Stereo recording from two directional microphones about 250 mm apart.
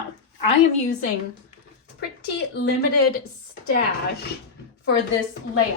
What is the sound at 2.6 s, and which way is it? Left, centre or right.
Speech, left.